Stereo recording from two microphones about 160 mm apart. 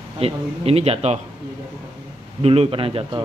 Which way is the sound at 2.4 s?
40° right (ahead or behind).